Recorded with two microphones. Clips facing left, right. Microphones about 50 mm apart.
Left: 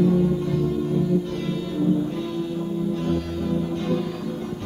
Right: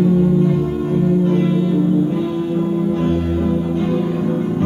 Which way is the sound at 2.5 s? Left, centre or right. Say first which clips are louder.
Right 8 dB; right.